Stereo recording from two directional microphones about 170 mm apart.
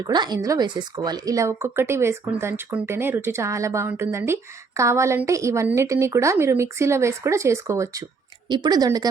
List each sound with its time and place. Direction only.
0.0 s a woman's voice: 25° right (ahead or behind)